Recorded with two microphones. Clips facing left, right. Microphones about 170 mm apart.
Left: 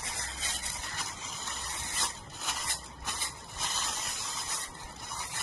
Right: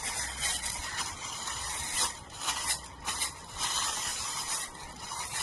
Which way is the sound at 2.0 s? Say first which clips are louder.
Even; centre (ahead or behind).